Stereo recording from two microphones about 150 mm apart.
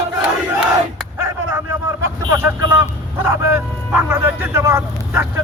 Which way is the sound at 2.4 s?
15° right (ahead or behind).